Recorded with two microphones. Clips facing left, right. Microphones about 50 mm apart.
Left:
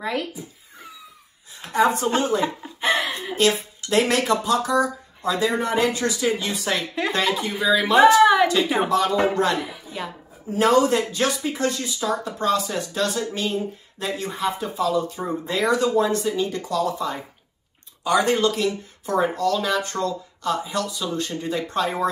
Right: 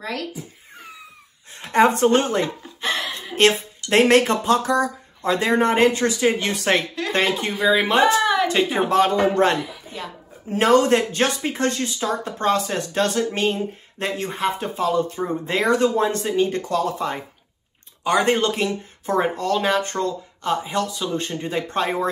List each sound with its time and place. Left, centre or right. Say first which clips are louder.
0.0 s speech: left 2 dB; centre
1.5 s speech: right 3 dB; right
2.4 s a sound: left 3 dB; centre
3.3 s speech: right 4 dB; right
7.6 s speech: right 1 dB; right
8.2 s a sound: left 5 dB; centre
8.8 s speech: right 2 dB; right
9.9 s speech: left 2 dB; centre
10.5 s speech: right 2 dB; right